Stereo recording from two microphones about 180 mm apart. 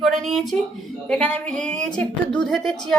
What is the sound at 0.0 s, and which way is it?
A woman's voice, centre (ahead or behind).